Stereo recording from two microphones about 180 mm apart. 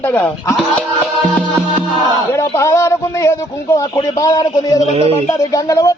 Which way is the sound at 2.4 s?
15° left (ahead or behind).